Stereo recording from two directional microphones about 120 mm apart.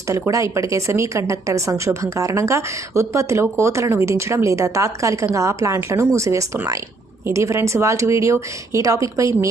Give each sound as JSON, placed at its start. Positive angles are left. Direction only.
{"t": 0.1, "sound": "speech", "side_deg": -25}